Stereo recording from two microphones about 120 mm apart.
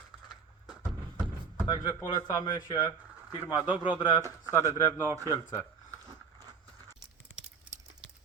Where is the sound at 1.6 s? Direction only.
35° left (ahead or behind).